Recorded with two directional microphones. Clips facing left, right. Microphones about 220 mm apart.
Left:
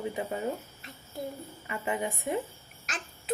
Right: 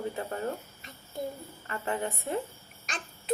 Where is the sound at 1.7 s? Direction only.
15° left (ahead or behind).